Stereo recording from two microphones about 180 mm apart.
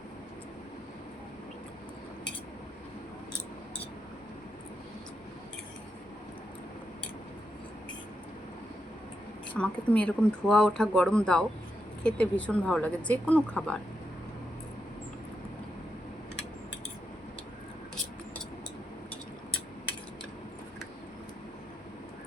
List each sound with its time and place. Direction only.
9.6 s speech: centre (ahead or behind)